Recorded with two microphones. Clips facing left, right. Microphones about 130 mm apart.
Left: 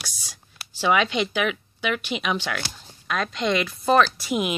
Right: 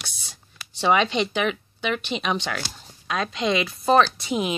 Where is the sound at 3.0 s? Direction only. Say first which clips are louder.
Even; 20° right (ahead or behind).